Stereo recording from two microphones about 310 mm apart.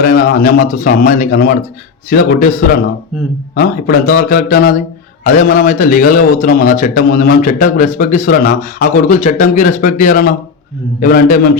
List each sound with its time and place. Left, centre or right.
0.0 s a man's voice: left